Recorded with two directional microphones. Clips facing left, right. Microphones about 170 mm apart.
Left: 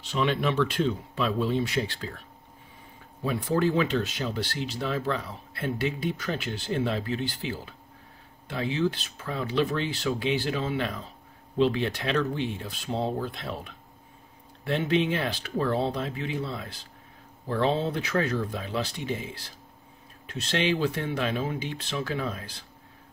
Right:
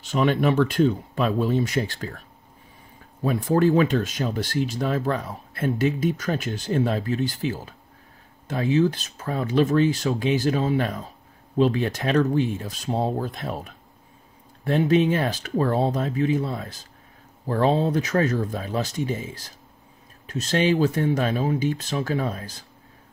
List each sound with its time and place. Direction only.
0.0 s speech: 45° right (ahead or behind)
3.3 s speech: 45° right (ahead or behind)